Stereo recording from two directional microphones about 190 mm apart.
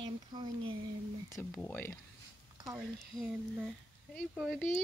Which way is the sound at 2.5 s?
20° right (ahead or behind).